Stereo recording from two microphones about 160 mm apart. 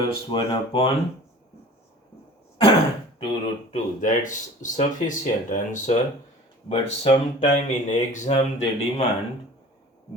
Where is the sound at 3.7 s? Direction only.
50° left (ahead or behind).